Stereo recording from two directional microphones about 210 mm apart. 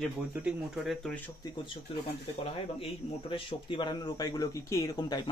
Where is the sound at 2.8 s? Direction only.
25° left (ahead or behind).